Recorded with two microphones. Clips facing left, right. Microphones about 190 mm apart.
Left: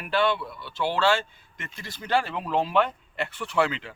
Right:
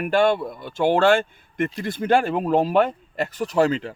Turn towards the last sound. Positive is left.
turn(degrees=-40)  # may be behind; listen again after turning